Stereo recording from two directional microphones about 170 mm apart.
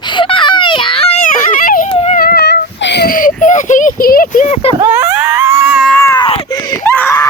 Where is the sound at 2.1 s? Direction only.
65° left (ahead or behind).